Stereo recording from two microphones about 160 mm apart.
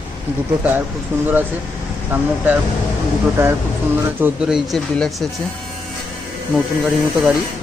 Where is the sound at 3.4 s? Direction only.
15° right (ahead or behind); by 5.3 s 5° left (ahead or behind).